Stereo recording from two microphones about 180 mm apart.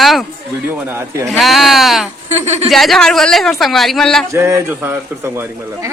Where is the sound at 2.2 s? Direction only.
40° right (ahead or behind).